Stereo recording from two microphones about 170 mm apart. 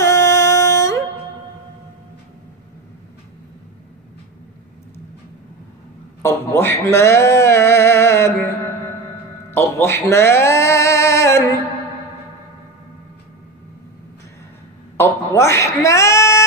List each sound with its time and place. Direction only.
0.0 s music: 20° left (ahead or behind)
6.2 s speech: 15° left (ahead or behind)
9.5 s speech: 15° left (ahead or behind)
15.0 s a woman's voice: 15° left (ahead or behind)